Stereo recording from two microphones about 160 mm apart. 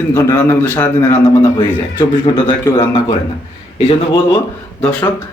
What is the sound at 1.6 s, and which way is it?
A man's voice, 25° left (ahead or behind).